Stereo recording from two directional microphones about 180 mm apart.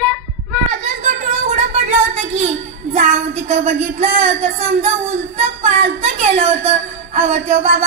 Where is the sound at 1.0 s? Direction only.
40° right (ahead or behind).